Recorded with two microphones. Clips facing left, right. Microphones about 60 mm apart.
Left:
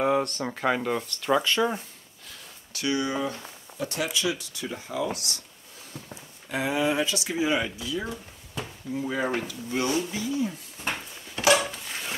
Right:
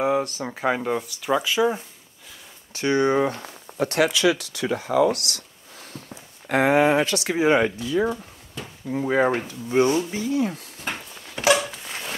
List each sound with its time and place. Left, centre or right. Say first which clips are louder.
0.0 s speech: right 2 dB; centre
2.7 s speech: right 7 dB; right
3.7 s speech: right 8 dB; right
6.5 s speech: right 8 dB; right
10.2 s speech: right 5 dB; right
10.9 s a sound: even; centre